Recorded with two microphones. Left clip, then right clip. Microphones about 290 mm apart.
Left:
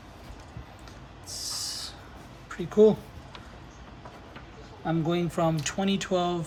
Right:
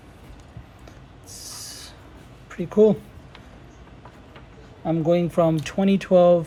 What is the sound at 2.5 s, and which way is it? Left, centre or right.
Speech, centre.